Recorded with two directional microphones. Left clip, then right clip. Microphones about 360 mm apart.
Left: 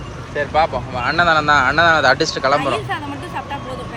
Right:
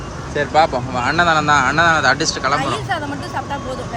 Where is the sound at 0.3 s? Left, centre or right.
Centre.